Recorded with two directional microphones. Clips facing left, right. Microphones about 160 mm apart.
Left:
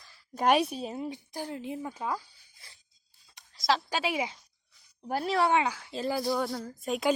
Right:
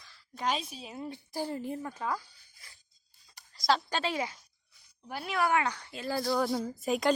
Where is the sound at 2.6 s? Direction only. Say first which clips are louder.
Left 1 dB; 30° left (ahead or behind).